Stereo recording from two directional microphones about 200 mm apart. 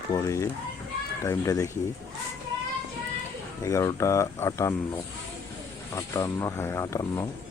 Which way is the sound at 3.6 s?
15° left (ahead or behind).